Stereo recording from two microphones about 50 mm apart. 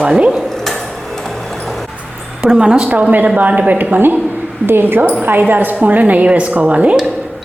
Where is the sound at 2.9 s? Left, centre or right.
Right.